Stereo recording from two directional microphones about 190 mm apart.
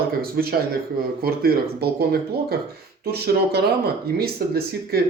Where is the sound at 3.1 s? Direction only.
55° right (ahead or behind).